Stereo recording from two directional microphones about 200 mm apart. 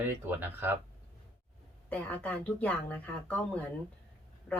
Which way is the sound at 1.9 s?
5° left (ahead or behind).